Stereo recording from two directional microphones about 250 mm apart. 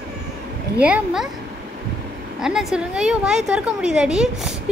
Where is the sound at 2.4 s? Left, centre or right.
Centre.